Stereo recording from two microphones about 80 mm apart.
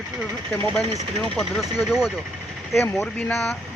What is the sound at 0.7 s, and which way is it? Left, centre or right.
Speech, centre.